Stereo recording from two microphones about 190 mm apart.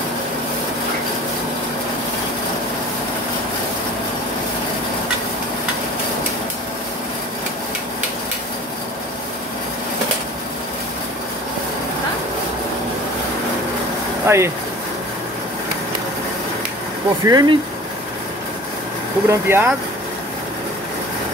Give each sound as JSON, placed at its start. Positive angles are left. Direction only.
{"t": 14.2, "sound": "speech", "side_deg": -15}
{"t": 17.3, "sound": "speech", "side_deg": -20}
{"t": 19.2, "sound": "speech", "side_deg": -15}